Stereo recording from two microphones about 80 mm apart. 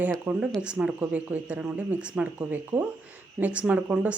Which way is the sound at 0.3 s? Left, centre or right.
Centre.